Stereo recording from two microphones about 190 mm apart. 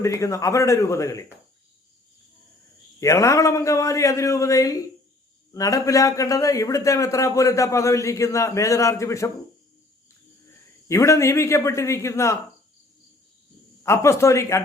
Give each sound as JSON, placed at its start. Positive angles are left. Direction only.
{"t": 0.0, "sound": "a man's voice", "side_deg": 15}
{"t": 3.0, "sound": "a man's voice", "side_deg": 15}
{"t": 10.8, "sound": "a man's voice", "side_deg": 15}
{"t": 13.8, "sound": "a man's voice", "side_deg": 15}